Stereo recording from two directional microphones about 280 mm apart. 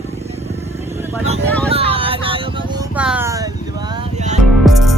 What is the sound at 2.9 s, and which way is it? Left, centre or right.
Music, centre.